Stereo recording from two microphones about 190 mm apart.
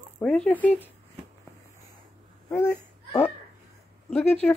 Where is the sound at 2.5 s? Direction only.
10° left (ahead or behind).